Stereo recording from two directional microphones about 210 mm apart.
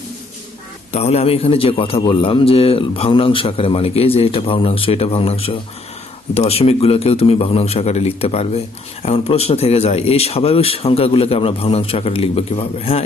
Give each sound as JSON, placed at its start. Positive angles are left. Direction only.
{"t": 0.9, "sound": "a man's voice", "side_deg": 30}